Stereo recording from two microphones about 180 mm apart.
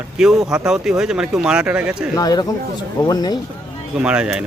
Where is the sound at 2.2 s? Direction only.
20° left (ahead or behind).